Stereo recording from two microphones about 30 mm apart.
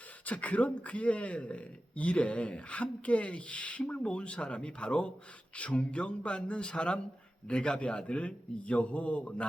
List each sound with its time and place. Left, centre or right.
0.3 s speech: left